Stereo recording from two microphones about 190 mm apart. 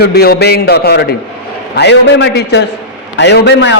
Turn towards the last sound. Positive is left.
turn(degrees=65)  # may be behind; listen again after turning